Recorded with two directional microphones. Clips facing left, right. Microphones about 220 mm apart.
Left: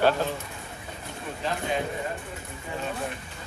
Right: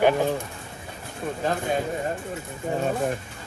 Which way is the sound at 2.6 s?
45° right (ahead or behind).